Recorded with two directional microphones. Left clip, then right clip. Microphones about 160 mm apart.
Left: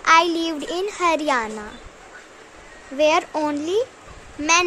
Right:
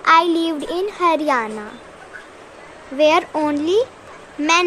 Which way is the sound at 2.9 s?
5° left (ahead or behind).